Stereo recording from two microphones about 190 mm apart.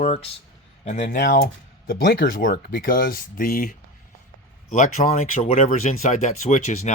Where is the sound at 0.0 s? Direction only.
30° left (ahead or behind).